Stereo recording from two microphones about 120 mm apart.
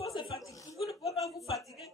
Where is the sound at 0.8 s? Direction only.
Centre (ahead or behind).